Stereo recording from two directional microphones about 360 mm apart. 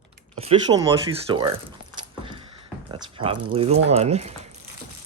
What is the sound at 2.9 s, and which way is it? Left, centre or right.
Speech, centre.